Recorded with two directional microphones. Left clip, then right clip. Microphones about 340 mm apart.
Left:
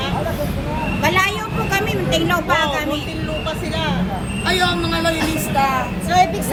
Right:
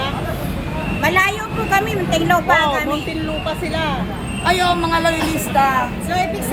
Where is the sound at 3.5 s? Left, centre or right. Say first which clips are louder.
Right 2 dB; right.